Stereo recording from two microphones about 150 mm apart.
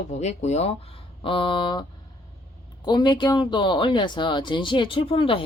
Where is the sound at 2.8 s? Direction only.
30° left (ahead or behind).